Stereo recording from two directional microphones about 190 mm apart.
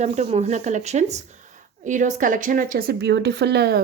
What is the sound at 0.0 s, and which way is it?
A woman's voice, 35° right (ahead or behind).